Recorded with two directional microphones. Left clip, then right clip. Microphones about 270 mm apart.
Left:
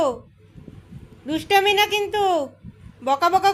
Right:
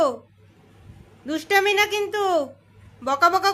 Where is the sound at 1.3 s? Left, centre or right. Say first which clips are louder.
Left 2 dB; centre.